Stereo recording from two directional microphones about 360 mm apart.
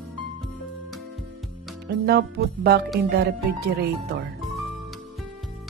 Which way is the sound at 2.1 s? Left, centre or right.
Right.